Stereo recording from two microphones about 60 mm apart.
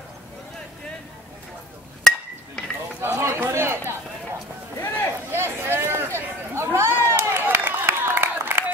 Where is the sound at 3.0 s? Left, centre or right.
Right.